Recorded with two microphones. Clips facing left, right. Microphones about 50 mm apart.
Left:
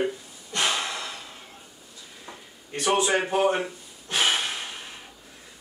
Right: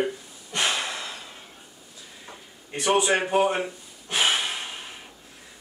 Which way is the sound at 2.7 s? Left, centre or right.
Centre.